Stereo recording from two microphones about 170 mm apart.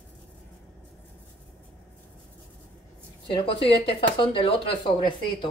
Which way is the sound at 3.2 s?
30° left (ahead or behind).